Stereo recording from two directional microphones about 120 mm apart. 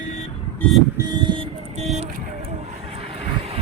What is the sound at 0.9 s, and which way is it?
Vehicle, 35° right (ahead or behind).